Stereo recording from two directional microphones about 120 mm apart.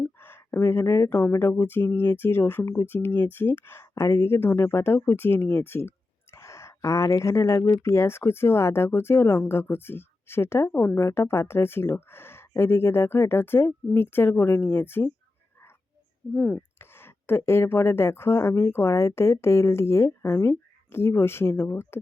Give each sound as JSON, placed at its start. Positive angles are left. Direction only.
{"t": 0.0, "sound": "speech", "side_deg": 20}
{"t": 16.3, "sound": "speech", "side_deg": 5}
{"t": 16.7, "sound": "speech", "side_deg": 20}